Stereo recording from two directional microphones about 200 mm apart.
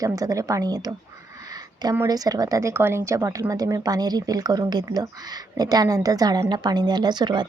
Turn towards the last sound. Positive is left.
turn(degrees=-20)  # may be behind; listen again after turning